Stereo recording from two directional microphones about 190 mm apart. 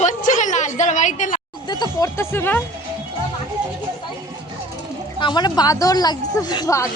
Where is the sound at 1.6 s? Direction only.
25° left (ahead or behind).